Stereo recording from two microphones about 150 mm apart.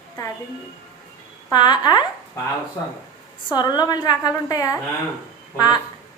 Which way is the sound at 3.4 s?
30° left (ahead or behind).